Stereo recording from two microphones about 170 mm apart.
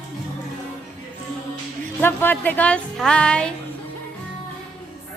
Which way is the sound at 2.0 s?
10° left (ahead or behind).